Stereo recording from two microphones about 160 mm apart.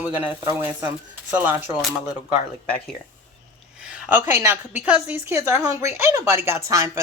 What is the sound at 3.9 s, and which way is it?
A woman's voice, 15° right (ahead or behind).